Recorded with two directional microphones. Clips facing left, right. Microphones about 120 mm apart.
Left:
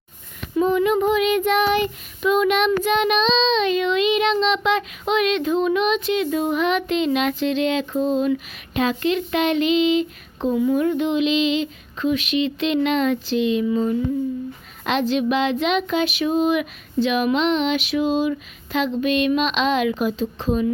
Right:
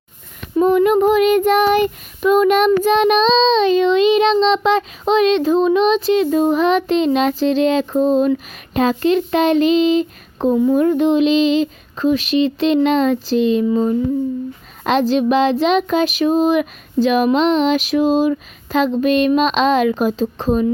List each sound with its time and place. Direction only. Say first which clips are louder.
0.5 s child singing: right 5 dB; 45° right (ahead or behind)